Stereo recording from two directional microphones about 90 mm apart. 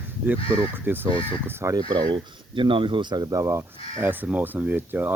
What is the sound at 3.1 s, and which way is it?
Speech, 45° right (ahead or behind).